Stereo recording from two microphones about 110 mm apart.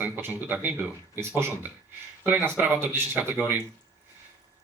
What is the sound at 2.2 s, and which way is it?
Speech, 15° right (ahead or behind).